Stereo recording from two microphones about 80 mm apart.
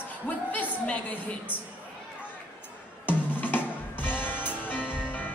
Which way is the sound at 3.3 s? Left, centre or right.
Left.